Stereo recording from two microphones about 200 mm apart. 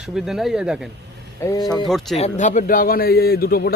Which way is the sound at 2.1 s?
35° left (ahead or behind).